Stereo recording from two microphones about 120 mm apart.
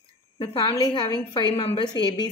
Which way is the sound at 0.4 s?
45° left (ahead or behind).